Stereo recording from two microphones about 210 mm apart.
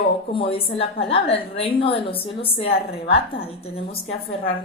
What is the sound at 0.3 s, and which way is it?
A woman's voice, 25° left (ahead or behind).